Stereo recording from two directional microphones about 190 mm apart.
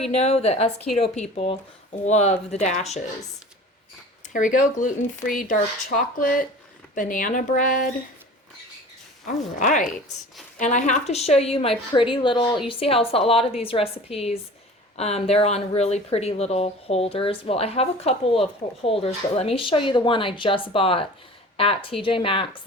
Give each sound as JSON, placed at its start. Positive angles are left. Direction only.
{"t": 0.1, "sound": "speech", "side_deg": 35}
{"t": 4.3, "sound": "speech", "side_deg": 45}
{"t": 9.2, "sound": "speech", "side_deg": 40}